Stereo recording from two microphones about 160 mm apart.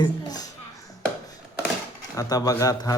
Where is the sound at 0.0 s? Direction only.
25° left (ahead or behind).